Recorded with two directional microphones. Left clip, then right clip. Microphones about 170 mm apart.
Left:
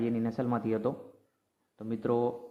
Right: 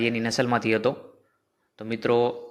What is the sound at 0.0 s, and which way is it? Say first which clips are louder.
A man's voice: right 8 dB; 15° right (ahead or behind).